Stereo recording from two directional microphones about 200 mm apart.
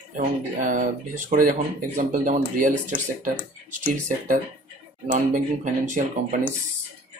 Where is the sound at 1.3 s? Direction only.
40° right (ahead or behind).